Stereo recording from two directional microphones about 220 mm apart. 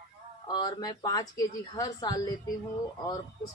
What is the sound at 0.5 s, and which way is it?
A woman's voice, 20° left (ahead or behind).